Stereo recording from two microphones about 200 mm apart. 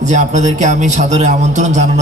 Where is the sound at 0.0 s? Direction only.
35° right (ahead or behind).